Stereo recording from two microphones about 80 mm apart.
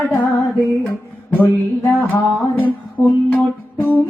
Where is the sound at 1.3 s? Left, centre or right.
Left.